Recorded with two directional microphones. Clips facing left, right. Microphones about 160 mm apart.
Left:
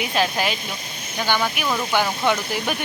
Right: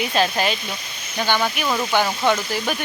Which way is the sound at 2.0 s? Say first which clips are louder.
Right 2 dB; 10° left (ahead or behind).